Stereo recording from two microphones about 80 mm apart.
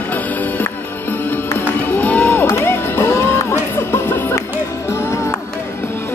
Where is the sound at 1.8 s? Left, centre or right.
Left.